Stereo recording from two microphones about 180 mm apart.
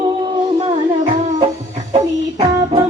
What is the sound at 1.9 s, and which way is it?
Music, 35° right (ahead or behind).